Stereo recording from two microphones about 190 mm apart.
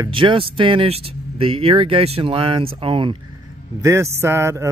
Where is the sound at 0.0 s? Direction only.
25° right (ahead or behind).